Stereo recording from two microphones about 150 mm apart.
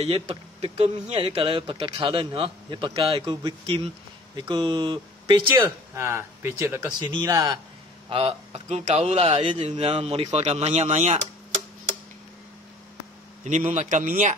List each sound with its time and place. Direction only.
0.0 s speech: 45° right (ahead or behind)
5.9 s speech: 15° right (ahead or behind)
7.0 s speech: 30° right (ahead or behind)
8.1 s speech: 40° right (ahead or behind)
13.4 s speech: 55° right (ahead or behind)